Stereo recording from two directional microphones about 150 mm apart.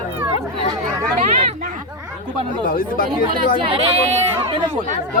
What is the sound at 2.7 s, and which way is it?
Speech, 70° left (ahead or behind).